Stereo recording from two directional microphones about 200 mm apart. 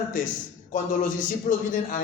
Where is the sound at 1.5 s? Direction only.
40° left (ahead or behind).